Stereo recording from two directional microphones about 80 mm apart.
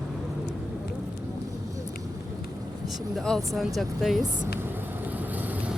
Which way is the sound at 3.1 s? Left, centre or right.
Centre.